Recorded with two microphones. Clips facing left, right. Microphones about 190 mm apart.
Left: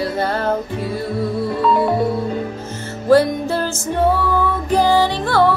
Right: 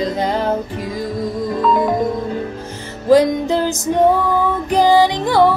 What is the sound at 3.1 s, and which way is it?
Music, 15° right (ahead or behind).